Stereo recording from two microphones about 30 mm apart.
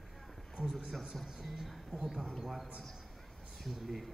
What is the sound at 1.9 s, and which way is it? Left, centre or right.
Speech, centre.